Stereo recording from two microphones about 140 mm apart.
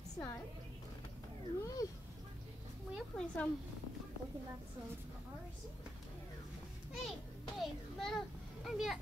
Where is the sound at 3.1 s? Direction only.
10° left (ahead or behind).